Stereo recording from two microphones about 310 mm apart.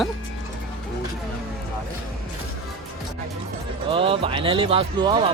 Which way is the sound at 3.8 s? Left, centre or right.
Centre.